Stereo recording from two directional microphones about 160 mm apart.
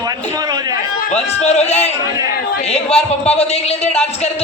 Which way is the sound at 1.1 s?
45° left (ahead or behind).